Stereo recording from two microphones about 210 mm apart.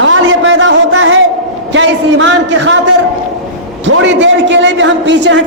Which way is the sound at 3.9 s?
60° right (ahead or behind).